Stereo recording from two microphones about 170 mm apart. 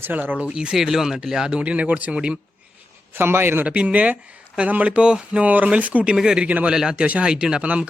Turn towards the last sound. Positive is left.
turn(degrees=-5)  # may be behind; listen again after turning